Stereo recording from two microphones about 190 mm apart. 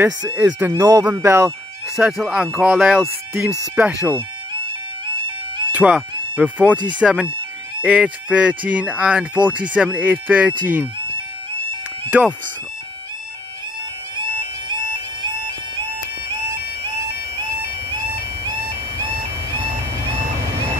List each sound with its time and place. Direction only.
0.3 s speech: 10° right (ahead or behind)
2.0 s speech: centre (ahead or behind)
5.7 s speech: 5° right (ahead or behind)
12.1 s speech: 10° right (ahead or behind)
14.1 s bagpipes: 25° right (ahead or behind)
16.8 s bagpipes: 25° right (ahead or behind)